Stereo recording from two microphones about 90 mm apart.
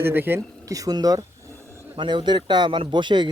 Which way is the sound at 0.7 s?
45° right (ahead or behind).